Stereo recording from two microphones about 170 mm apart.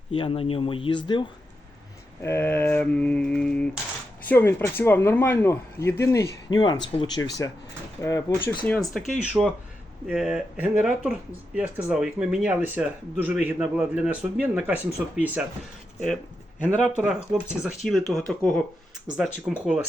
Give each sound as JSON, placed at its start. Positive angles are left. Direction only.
{"t": 0.1, "sound": "speech", "side_deg": 30}
{"t": 2.2, "sound": "speech", "side_deg": 10}
{"t": 8.6, "sound": "speech", "side_deg": 5}
{"t": 16.6, "sound": "speech", "side_deg": 5}